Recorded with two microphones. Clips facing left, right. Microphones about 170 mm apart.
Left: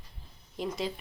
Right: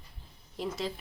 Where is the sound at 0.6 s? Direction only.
Centre (ahead or behind).